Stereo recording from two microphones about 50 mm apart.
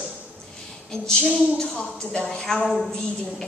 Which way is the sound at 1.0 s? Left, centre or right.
Centre.